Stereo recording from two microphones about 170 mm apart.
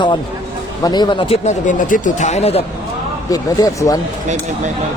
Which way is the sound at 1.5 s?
50° left (ahead or behind).